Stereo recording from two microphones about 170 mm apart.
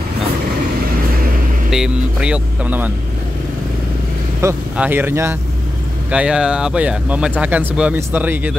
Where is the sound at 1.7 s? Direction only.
5° right (ahead or behind).